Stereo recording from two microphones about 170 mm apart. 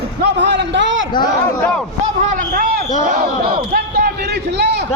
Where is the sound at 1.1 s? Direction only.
25° left (ahead or behind).